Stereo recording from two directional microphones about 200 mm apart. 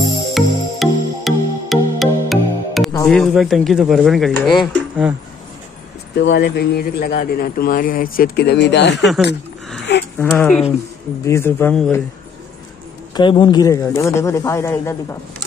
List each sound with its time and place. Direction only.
0.3 s music: centre (ahead or behind)
3.1 s speech: centre (ahead or behind)
6.1 s a man's voice: 60° left (ahead or behind)
10.1 s speech: 5° left (ahead or behind)
13.1 s speech: 25° left (ahead or behind)